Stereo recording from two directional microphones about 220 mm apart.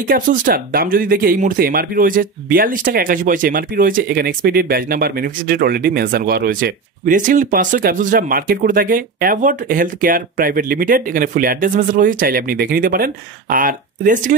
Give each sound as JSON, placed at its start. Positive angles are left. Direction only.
{"t": 0.1, "sound": "speech", "side_deg": -40}